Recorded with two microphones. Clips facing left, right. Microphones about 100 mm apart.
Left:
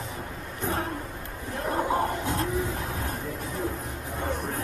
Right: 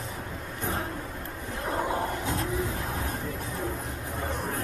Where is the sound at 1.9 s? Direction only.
65° left (ahead or behind).